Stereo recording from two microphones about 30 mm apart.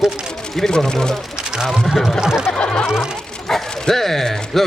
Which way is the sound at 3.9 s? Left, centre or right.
Centre.